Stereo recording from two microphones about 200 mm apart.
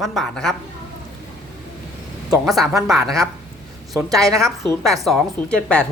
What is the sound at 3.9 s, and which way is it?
Speech, 15° right (ahead or behind).